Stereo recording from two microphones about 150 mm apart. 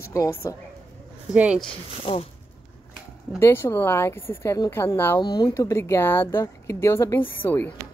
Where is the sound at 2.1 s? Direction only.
40° left (ahead or behind).